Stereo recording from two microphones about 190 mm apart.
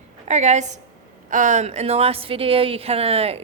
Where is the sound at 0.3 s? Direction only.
40° right (ahead or behind).